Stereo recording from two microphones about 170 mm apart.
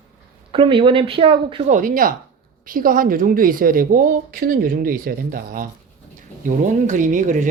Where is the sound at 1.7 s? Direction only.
50° right (ahead or behind).